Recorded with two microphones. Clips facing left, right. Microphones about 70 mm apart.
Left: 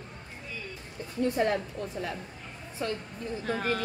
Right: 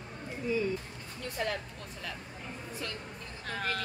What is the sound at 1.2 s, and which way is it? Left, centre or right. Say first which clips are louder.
Speech: left 8 dB; left.